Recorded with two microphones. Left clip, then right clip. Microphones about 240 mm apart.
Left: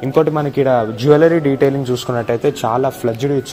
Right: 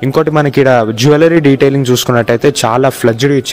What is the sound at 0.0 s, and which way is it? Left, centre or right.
A man's voice, right.